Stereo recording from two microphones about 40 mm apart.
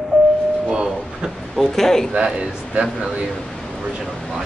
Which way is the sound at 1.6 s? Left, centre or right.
Centre.